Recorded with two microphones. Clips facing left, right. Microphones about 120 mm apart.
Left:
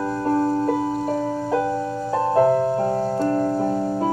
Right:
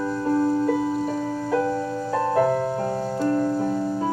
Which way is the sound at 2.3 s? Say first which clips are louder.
Left 4 dB; 25° left (ahead or behind).